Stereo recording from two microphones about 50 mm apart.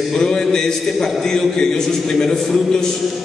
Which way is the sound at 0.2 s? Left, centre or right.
Centre.